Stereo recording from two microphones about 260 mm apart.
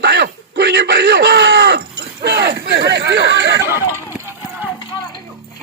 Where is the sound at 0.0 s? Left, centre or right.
Right.